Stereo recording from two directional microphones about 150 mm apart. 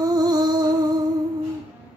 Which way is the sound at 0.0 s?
25° right (ahead or behind).